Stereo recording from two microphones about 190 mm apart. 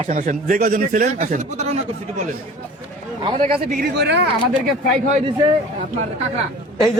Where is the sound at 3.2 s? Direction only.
35° right (ahead or behind).